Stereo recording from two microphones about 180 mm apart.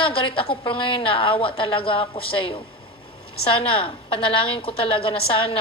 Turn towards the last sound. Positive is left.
turn(degrees=30)  # may be behind; listen again after turning